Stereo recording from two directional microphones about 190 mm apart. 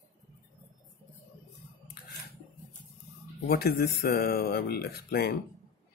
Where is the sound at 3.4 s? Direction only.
55° left (ahead or behind).